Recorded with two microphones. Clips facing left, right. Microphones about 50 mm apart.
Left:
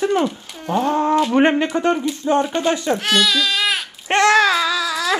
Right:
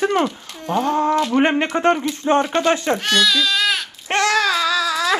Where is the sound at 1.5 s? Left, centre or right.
Right.